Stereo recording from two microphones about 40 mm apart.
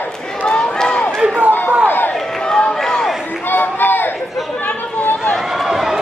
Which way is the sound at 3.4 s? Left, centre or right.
Left.